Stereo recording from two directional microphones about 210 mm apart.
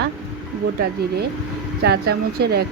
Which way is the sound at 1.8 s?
50° right (ahead or behind).